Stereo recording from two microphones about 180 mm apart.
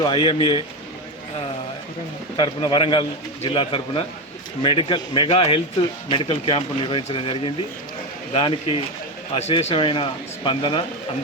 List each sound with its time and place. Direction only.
0.0 s speech: 25° left (ahead or behind)
2.3 s speech: 25° left (ahead or behind)